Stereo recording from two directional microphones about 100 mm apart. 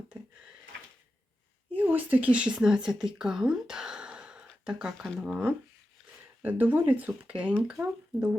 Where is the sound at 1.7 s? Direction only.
20° right (ahead or behind).